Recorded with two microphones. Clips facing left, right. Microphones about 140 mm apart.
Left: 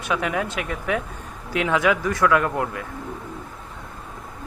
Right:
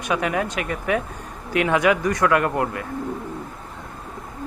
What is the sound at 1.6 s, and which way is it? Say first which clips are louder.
Speech: right 1 dB; 15° right (ahead or behind).